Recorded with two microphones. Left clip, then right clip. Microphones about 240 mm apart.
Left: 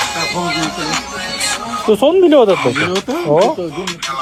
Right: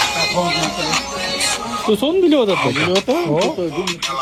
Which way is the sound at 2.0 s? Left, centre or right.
Left.